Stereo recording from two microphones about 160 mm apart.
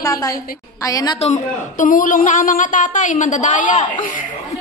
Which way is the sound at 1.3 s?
55° left (ahead or behind).